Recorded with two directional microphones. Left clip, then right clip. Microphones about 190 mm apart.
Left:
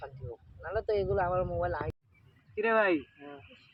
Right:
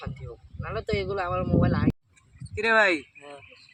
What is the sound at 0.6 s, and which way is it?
Speech, 25° right (ahead or behind).